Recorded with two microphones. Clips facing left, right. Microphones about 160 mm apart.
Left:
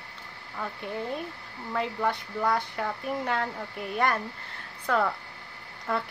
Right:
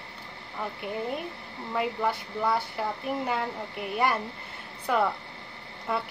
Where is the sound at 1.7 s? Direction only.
5° right (ahead or behind).